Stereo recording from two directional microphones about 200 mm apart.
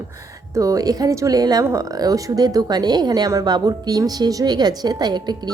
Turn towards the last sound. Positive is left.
turn(degrees=-20)  # may be behind; listen again after turning